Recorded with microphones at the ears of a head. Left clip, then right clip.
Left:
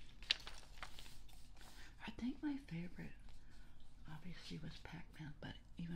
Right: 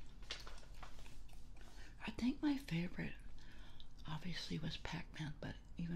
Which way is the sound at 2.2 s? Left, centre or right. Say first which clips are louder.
Right 6 dB; right.